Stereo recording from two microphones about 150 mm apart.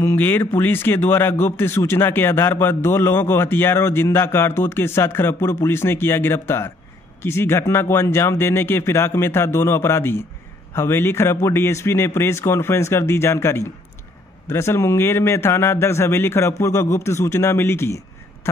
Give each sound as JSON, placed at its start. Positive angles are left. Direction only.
{"t": 0.0, "sound": "speech", "side_deg": 15}